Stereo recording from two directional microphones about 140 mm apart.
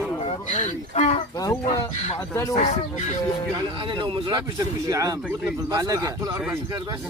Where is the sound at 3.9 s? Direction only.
35° right (ahead or behind).